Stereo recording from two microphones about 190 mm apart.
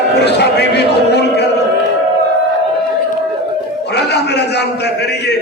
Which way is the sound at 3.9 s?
60° left (ahead or behind).